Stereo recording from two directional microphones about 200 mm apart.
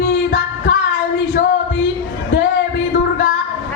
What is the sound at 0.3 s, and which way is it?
Music, 70° left (ahead or behind).